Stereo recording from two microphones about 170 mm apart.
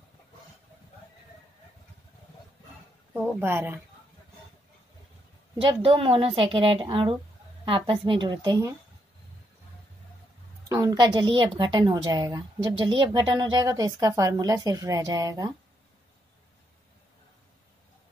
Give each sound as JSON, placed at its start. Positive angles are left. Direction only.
{"t": 3.3, "sound": "speech", "side_deg": -15}
{"t": 5.6, "sound": "a woman's voice", "side_deg": -30}
{"t": 10.7, "sound": "a woman's voice", "side_deg": -20}